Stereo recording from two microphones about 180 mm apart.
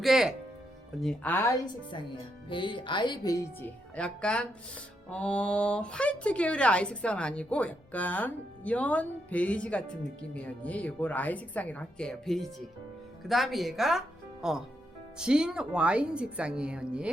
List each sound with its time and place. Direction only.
0.0 s speech: centre (ahead or behind)
1.0 s speech: 10° left (ahead or behind)
2.5 s speech: 25° left (ahead or behind); by 17.1 s 5° right (ahead or behind)